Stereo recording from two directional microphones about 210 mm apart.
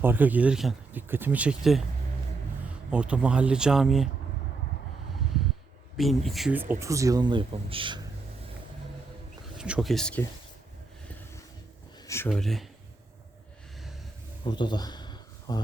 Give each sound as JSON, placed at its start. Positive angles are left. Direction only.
{"t": 0.0, "sound": "speech", "side_deg": -10}
{"t": 2.9, "sound": "speech", "side_deg": -5}
{"t": 6.0, "sound": "speech", "side_deg": 0}
{"t": 9.6, "sound": "speech", "side_deg": -5}
{"t": 12.0, "sound": "speech", "side_deg": 10}
{"t": 14.4, "sound": "a sound", "side_deg": 20}